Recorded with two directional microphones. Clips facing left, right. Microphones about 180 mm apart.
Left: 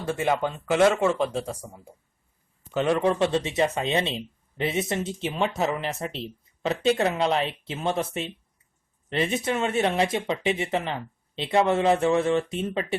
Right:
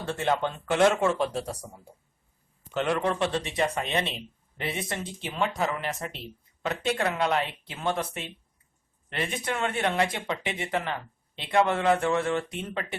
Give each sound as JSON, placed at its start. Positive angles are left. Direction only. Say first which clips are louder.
{"t": 0.1, "sound": "speech", "louder": "left 2 dB", "side_deg": 10}